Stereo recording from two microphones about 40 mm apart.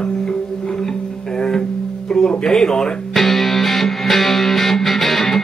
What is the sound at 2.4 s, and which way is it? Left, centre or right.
Speech, centre.